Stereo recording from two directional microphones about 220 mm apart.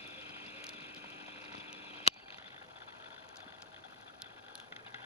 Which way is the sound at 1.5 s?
25° left (ahead or behind).